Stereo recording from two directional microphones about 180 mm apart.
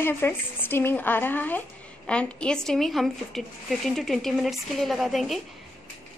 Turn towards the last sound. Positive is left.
turn(degrees=0)  # may be behind; listen again after turning